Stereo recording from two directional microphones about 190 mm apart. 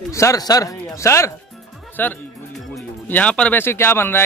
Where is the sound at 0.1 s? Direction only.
15° left (ahead or behind).